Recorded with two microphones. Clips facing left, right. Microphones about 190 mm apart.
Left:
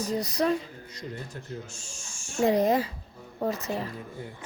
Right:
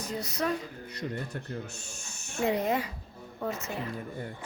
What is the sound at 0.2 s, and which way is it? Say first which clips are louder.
Speech: left 4 dB; 35° left (ahead or behind).